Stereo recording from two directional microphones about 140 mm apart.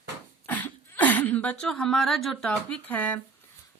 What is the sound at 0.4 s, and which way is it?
Speech, 10° left (ahead or behind).